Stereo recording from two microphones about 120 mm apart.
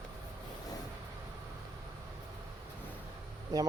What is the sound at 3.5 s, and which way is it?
Speech, 30° right (ahead or behind).